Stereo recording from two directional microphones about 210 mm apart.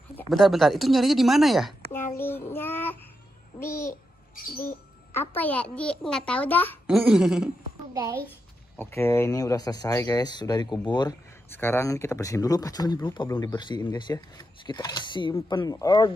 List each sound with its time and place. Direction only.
0.3 s speech: centre (ahead or behind)
1.9 s child singing: 10° left (ahead or behind)
3.5 s babbling: 10° left (ahead or behind)
5.1 s speech: 10° left (ahead or behind)
6.9 s speech: 5° right (ahead or behind)
7.9 s a child's voice: 15° right (ahead or behind)
8.7 s speech: 10° left (ahead or behind)